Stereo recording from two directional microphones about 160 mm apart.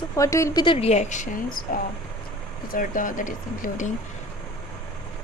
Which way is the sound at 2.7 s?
60° left (ahead or behind).